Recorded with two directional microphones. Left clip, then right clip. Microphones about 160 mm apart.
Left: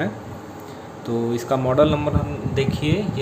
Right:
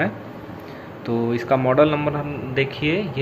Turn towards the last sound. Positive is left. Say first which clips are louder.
# right 1 dB
turn(degrees=20)  # may be behind; listen again after turning